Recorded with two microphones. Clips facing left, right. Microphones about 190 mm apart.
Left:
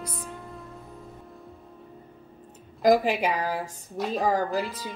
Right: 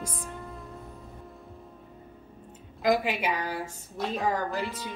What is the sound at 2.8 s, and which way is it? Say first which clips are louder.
Speech: left 5 dB; 40° left (ahead or behind).